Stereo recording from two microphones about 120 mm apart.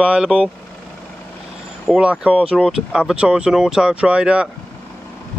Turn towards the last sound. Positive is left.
turn(degrees=-10)  # may be behind; listen again after turning